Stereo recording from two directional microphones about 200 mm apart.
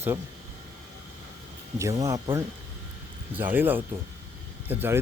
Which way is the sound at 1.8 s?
15° right (ahead or behind).